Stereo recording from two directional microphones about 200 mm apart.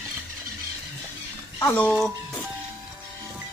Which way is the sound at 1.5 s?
10° left (ahead or behind).